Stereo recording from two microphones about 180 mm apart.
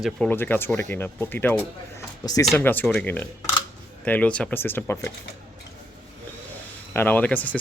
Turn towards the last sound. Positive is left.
turn(degrees=10)  # may be behind; listen again after turning